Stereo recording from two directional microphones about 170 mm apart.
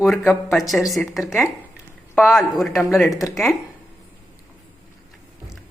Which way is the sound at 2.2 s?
Centre (ahead or behind).